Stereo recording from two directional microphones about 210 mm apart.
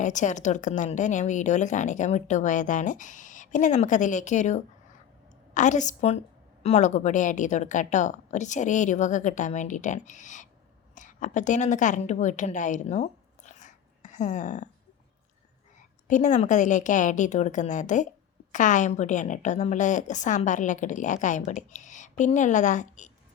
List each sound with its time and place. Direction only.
0.0 s a woman's voice: 35° left (ahead or behind)
16.0 s a woman's voice: 35° left (ahead or behind)